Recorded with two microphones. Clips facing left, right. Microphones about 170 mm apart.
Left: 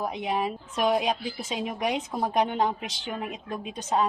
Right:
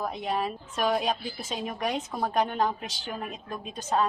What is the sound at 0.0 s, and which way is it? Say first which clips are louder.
A woman's voice: left 2 dB; 15° left (ahead or behind).